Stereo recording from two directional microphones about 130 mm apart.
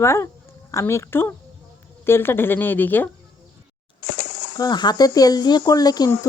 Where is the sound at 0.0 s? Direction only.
20° left (ahead or behind).